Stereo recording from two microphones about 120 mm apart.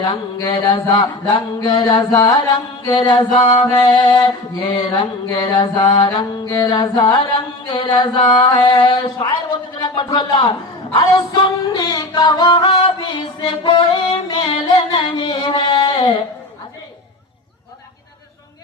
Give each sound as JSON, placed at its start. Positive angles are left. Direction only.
{"t": 0.0, "sound": "mantra", "side_deg": 40}
{"t": 2.8, "sound": "music", "side_deg": 40}
{"t": 4.9, "sound": "mantra", "side_deg": 40}
{"t": 13.1, "sound": "music", "side_deg": 45}